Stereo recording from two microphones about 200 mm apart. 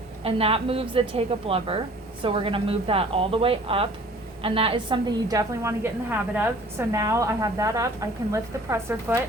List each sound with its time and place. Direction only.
0.3 s a woman's voice: 30° right (ahead or behind); by 9.2 s 10° right (ahead or behind)